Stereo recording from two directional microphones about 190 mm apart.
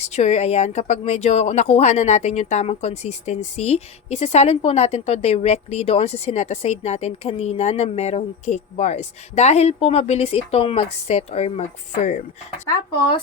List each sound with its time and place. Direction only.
0.1 s speech: 35° left (ahead or behind)
12.6 s speech: 25° left (ahead or behind)